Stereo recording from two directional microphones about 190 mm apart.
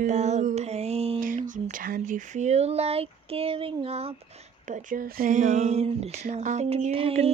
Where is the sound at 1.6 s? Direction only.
45° right (ahead or behind).